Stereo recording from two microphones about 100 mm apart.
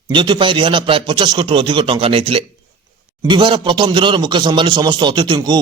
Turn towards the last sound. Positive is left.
turn(degrees=-45)  # may be behind; listen again after turning